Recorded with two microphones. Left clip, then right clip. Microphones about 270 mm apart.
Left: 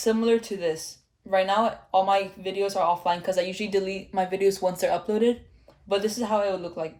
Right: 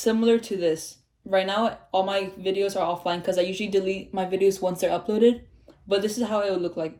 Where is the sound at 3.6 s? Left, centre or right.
Left.